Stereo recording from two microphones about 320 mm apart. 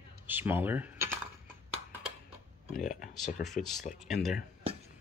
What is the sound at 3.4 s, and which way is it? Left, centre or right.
Speech, centre.